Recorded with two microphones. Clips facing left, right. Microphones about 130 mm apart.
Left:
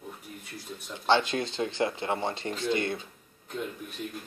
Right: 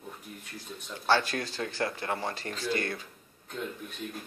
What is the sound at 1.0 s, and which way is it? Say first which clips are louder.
Speech: left 2 dB; 20° left (ahead or behind).